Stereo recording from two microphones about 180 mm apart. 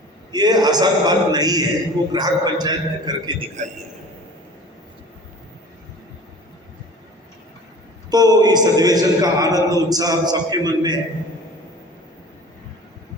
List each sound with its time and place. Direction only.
0.3 s speech: 20° right (ahead or behind)
8.1 s speech: 20° right (ahead or behind)